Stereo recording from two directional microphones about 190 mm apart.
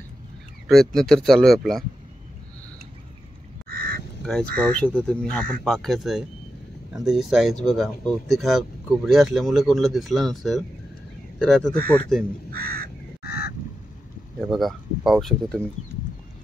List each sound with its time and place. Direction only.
0.7 s speech: centre (ahead or behind)
3.6 s goose: 50° right (ahead or behind)
4.2 s speech: 5° left (ahead or behind)
11.7 s speech: 55° right (ahead or behind)
12.4 s crow: 55° right (ahead or behind)
13.2 s fowl: 55° left (ahead or behind)
14.4 s speech: centre (ahead or behind)